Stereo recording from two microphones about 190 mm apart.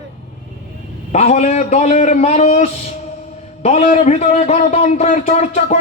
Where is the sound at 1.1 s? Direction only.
35° left (ahead or behind).